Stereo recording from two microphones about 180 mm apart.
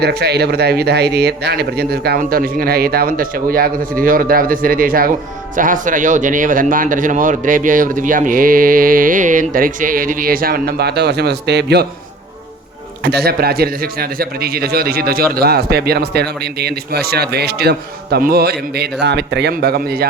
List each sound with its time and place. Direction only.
0.0 s a man's voice: 65° right (ahead or behind)
13.0 s a man's voice: 65° right (ahead or behind)